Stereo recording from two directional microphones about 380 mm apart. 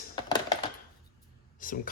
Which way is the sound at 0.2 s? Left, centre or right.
Centre.